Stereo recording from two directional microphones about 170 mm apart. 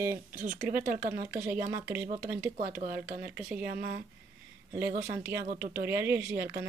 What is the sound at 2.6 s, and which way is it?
Speech, 60° right (ahead or behind).